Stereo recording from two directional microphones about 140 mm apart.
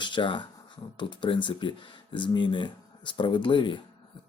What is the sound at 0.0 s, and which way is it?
Speech, 35° left (ahead or behind).